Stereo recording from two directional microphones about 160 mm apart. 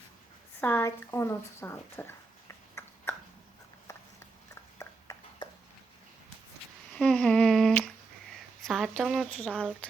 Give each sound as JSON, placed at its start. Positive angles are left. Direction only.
{"t": 0.6, "sound": "speech", "side_deg": 15}
{"t": 2.8, "sound": "a sound", "side_deg": 15}
{"t": 6.9, "sound": "humming", "side_deg": 5}
{"t": 8.3, "sound": "speech", "side_deg": 0}